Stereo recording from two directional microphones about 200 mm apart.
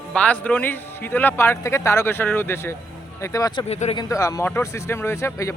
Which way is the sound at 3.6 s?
35° left (ahead or behind).